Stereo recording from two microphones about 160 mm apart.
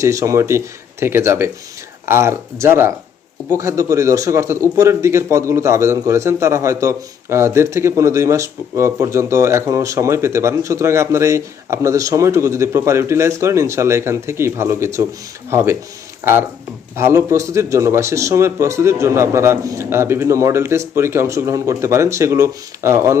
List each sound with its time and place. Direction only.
0.0 s a man's voice: 20° right (ahead or behind)
16.9 s a man's voice: 15° right (ahead or behind)